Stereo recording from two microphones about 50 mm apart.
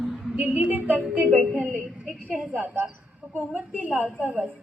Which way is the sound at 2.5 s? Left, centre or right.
Right.